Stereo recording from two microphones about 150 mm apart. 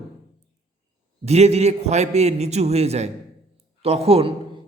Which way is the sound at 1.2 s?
45° right (ahead or behind).